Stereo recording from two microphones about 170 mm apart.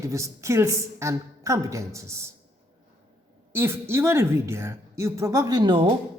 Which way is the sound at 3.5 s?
15° right (ahead or behind).